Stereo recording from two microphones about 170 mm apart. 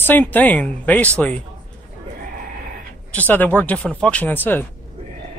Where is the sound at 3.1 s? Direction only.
10° left (ahead or behind).